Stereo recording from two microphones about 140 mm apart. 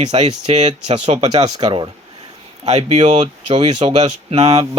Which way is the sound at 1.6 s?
40° right (ahead or behind).